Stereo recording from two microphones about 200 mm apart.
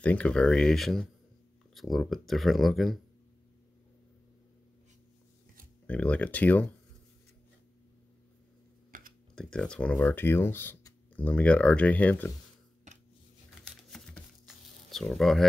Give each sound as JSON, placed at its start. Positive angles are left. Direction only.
{"t": 0.0, "sound": "speech", "side_deg": 5}
{"t": 5.9, "sound": "speech", "side_deg": 5}
{"t": 8.9, "sound": "typing", "side_deg": -40}
{"t": 9.3, "sound": "speech", "side_deg": 5}
{"t": 13.7, "sound": "a sound", "side_deg": 5}